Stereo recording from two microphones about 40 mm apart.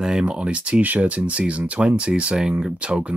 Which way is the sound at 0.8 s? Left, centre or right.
Right.